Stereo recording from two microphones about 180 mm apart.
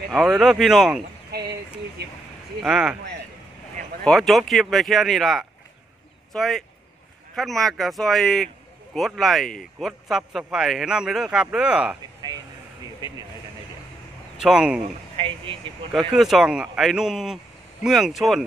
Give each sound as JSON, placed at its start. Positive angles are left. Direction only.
{"t": 0.1, "sound": "a man's voice", "side_deg": 0}
{"t": 2.0, "sound": "a sound", "side_deg": -65}
{"t": 2.6, "sound": "a man's voice", "side_deg": -5}
{"t": 4.0, "sound": "a man's voice", "side_deg": 0}
{"t": 14.4, "sound": "a man's voice", "side_deg": -5}
{"t": 15.1, "sound": "speech", "side_deg": -30}
{"t": 15.9, "sound": "a man's voice", "side_deg": 0}